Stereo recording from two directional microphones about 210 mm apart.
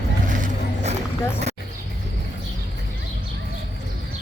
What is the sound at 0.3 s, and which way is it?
Music, 40° right (ahead or behind).